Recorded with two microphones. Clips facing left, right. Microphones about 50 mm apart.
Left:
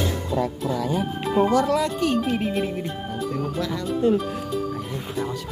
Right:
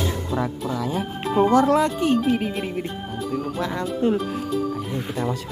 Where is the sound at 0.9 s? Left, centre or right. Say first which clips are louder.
Right 1 dB; centre.